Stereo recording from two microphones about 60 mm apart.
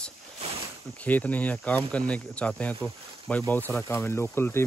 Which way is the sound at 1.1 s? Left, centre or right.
Left.